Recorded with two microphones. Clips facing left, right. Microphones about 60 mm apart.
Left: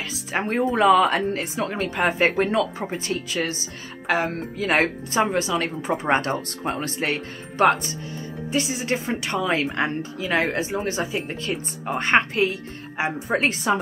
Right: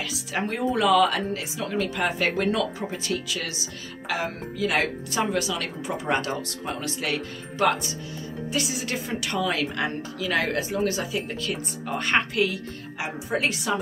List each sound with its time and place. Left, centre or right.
0.0 s speech: left
1.1 s a woman's voice: left